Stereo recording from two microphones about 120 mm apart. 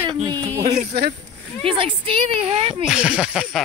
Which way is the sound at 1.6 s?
50° right (ahead or behind).